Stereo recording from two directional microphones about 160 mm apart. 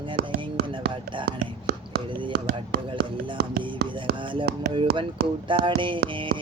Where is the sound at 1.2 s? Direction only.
90° right.